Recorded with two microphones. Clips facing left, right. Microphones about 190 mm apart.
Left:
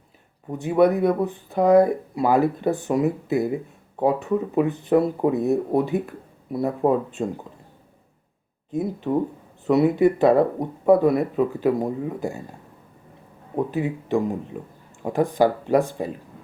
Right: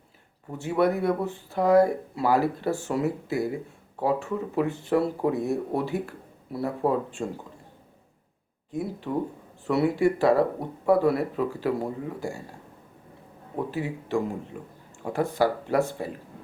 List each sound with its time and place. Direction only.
0.5 s speech: 20° left (ahead or behind)
8.7 s speech: 20° left (ahead or behind)
13.6 s speech: 20° left (ahead or behind)